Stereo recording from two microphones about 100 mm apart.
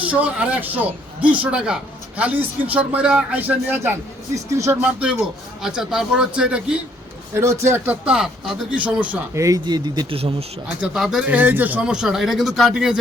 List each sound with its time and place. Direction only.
0.0 s speech: 15° right (ahead or behind)
4.4 s speech: 30° right (ahead or behind)
4.8 s speech: 10° right (ahead or behind)
7.3 s a man's voice: 25° right (ahead or behind)
8.7 s speech: 15° right (ahead or behind)
9.3 s speech: 35° right (ahead or behind)
9.6 s a man's voice: 45° right (ahead or behind)
10.1 s speech: 65° right (ahead or behind)
10.8 s speech: 5° right (ahead or behind)
11.3 s speech: 20° right (ahead or behind)